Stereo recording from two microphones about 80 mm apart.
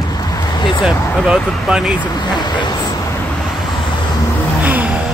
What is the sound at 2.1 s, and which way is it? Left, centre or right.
Speech, left.